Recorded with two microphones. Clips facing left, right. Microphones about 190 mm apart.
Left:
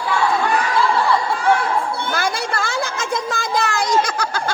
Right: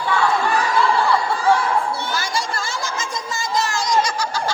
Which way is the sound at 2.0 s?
55° left (ahead or behind).